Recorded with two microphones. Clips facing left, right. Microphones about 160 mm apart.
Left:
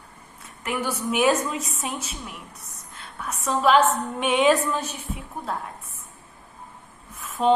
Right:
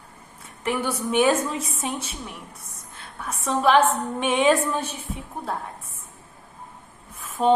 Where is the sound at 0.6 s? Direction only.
30° right (ahead or behind).